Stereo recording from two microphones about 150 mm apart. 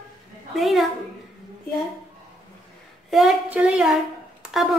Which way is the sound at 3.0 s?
Centre (ahead or behind).